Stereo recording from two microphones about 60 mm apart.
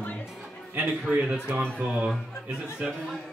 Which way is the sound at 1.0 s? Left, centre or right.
Centre.